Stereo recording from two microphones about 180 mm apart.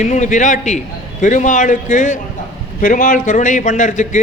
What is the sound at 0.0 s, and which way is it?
A man's voice, 45° left (ahead or behind).